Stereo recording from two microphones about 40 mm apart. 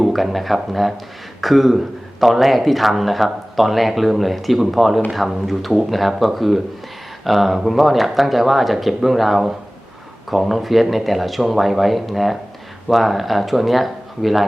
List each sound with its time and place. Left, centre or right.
0.0 s a man's voice: centre